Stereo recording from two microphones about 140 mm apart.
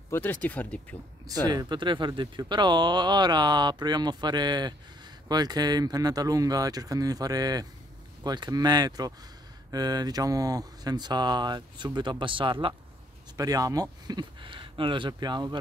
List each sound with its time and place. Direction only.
0.1 s speech: 15° left (ahead or behind)
1.5 s speech: 30° right (ahead or behind)
13.4 s speech: 25° right (ahead or behind)